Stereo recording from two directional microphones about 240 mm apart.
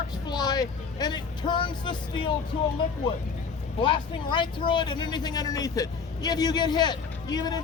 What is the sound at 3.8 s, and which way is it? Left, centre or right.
Speech, centre.